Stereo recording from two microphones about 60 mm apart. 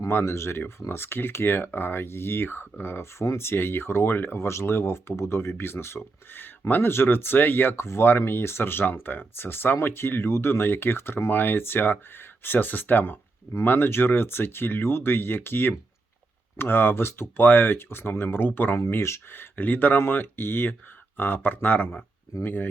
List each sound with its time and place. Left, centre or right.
0.1 s speech: left
18.9 s speech: left